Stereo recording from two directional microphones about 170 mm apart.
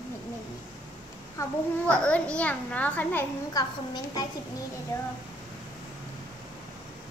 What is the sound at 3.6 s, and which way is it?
Speech, 20° left (ahead or behind).